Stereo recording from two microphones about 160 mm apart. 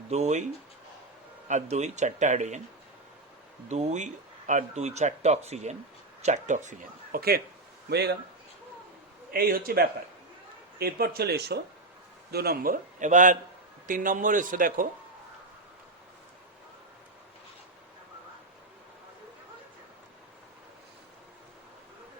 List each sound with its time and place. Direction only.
0.1 s speech: 45° right (ahead or behind)
1.5 s speech: 50° right (ahead or behind)
3.7 s speech: 45° right (ahead or behind)
7.1 s a man's voice: 75° right (ahead or behind)
7.9 s speech: 90° right
9.3 s a man's voice: 70° right (ahead or behind); by 11.6 s 90° right
12.3 s a man's voice: 75° right (ahead or behind); by 14.8 s 55° right (ahead or behind)